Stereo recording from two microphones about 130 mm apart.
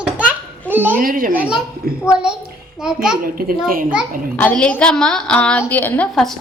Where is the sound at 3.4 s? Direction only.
90° right.